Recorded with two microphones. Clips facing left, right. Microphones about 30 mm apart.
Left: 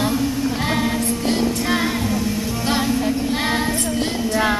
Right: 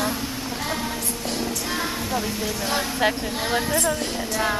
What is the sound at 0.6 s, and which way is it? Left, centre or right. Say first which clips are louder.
Music: left 5 dB; left.